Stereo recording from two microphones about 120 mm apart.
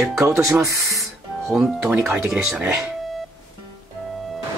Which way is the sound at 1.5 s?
5° right (ahead or behind).